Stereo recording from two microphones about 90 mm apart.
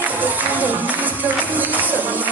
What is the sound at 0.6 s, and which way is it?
Music, 20° right (ahead or behind).